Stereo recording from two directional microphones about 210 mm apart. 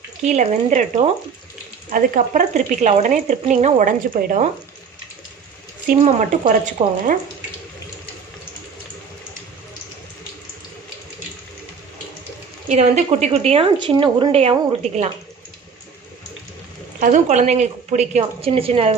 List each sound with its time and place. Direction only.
0.3 s speech: 35° right (ahead or behind)
6.1 s speech: 35° right (ahead or behind)
12.6 s speech: 30° right (ahead or behind)
17.0 s speech: 35° right (ahead or behind)